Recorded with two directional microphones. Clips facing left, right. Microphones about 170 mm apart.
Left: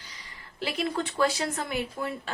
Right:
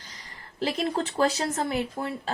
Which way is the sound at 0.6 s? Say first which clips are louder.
Right 3 dB; 35° right (ahead or behind).